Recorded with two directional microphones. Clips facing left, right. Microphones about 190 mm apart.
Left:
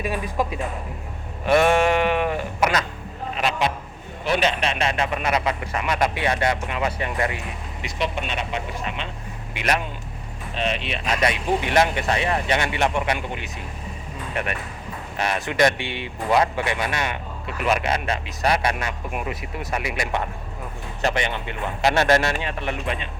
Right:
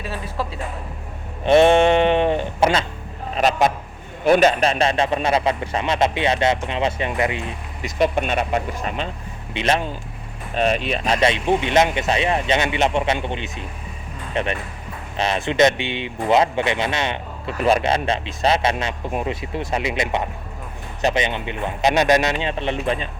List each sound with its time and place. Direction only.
0.0 s speech: 15° left (ahead or behind)
1.5 s speech: 25° right (ahead or behind)
3.3 s speech: 40° right (ahead or behind); by 7.4 s 20° right (ahead or behind)
7.8 s speech: 45° right (ahead or behind)
9.6 s speech: 25° right (ahead or behind)
10.5 s speech: 45° right (ahead or behind); by 23.0 s 30° right (ahead or behind)